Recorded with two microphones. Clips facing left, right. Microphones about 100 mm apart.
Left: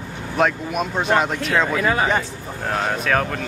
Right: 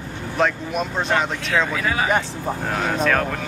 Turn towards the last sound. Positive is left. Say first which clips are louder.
# right 1 dB
turn(degrees=5)  # may be behind; listen again after turning